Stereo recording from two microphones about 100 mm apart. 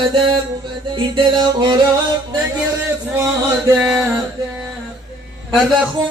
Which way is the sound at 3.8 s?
10° right (ahead or behind).